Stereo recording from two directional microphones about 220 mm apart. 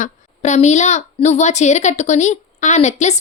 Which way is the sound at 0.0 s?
30° left (ahead or behind).